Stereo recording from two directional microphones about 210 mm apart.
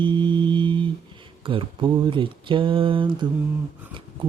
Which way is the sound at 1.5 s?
25° right (ahead or behind).